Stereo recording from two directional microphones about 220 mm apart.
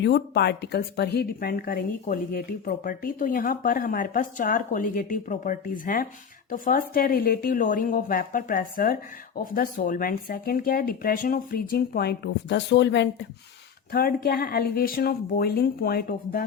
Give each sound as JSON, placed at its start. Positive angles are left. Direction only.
{"t": 0.0, "sound": "a woman's voice", "side_deg": 50}